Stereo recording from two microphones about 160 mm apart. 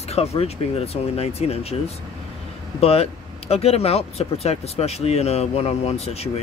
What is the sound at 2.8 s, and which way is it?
Speech, 40° left (ahead or behind).